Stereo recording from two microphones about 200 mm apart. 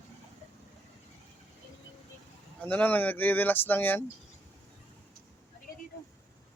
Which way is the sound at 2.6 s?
10° left (ahead or behind).